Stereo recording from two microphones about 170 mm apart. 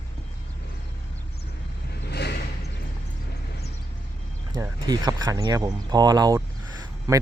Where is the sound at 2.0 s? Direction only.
80° left.